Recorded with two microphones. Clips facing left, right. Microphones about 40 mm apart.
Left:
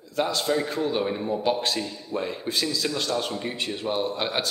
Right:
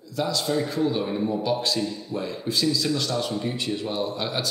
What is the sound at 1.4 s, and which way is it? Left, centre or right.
A man's voice, left.